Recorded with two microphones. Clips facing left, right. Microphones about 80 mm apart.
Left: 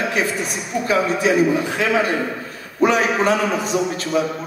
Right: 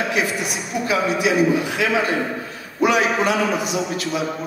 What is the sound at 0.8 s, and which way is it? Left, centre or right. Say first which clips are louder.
A woman's voice: left 2 dB; left.